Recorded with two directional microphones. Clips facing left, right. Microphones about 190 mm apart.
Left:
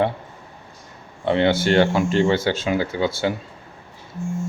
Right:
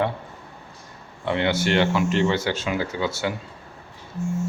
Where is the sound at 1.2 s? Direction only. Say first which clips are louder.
Left 4 dB; 30° left (ahead or behind).